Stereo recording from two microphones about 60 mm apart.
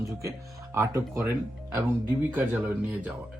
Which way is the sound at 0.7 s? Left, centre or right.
Right.